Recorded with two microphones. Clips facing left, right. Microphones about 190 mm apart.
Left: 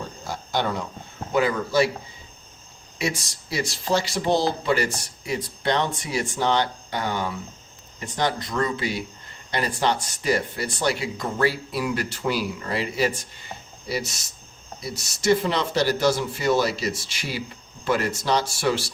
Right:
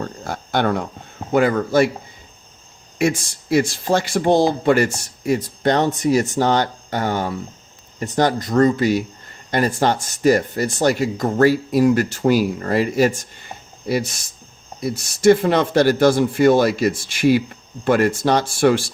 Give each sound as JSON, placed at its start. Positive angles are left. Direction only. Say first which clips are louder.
{"t": 0.0, "sound": "a sound", "louder": "right 6 dB", "side_deg": -60}
{"t": 1.3, "sound": "speech", "louder": "right 6 dB", "side_deg": -55}
{"t": 3.0, "sound": "speech", "louder": "right 8 dB", "side_deg": -50}